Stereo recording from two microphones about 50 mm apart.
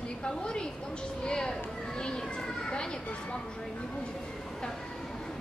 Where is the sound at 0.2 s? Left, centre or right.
Centre.